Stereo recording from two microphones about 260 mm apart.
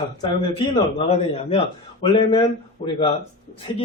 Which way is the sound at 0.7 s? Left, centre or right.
Left.